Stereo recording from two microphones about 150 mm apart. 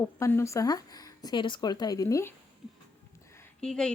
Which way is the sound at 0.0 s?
15° left (ahead or behind).